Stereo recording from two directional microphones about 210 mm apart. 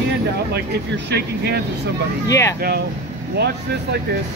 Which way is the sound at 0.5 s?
50° right (ahead or behind).